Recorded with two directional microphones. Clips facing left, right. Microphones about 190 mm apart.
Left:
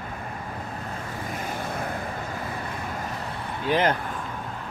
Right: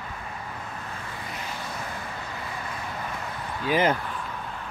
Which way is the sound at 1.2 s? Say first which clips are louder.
Left 6 dB; 50° left (ahead or behind).